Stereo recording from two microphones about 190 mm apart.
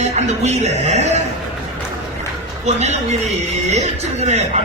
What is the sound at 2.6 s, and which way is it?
A man's voice, 35° right (ahead or behind).